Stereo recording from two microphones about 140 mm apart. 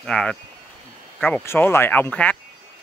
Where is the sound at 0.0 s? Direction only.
5° left (ahead or behind).